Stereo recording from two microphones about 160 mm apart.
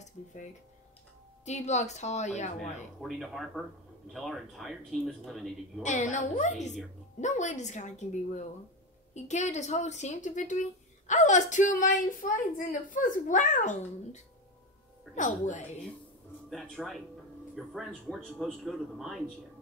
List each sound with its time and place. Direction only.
1.4 s a woman's voice: 45° left (ahead or behind)
3.0 s a man's voice: centre (ahead or behind)
5.8 s a woman's voice: 50° left (ahead or behind)
9.1 s a woman's voice: 45° left (ahead or behind)
16.4 s a man's voice: 5° left (ahead or behind)